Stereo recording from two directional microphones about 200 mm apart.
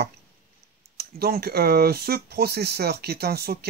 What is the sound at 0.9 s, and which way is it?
Speech, 50° right (ahead or behind).